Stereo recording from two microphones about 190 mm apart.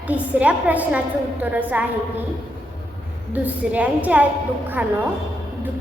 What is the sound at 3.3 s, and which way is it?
Speech, 10° right (ahead or behind).